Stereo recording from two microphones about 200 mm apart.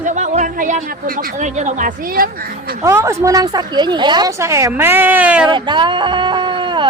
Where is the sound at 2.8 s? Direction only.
15° right (ahead or behind).